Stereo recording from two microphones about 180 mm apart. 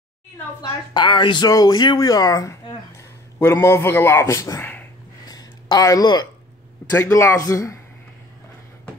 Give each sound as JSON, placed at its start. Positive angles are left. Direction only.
{"t": 0.6, "sound": "speech", "side_deg": 25}
{"t": 5.3, "sound": "a sound", "side_deg": 20}
{"t": 6.9, "sound": "a man's voice", "side_deg": 15}